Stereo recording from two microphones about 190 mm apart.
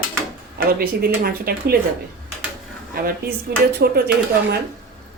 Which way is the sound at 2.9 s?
50° right (ahead or behind).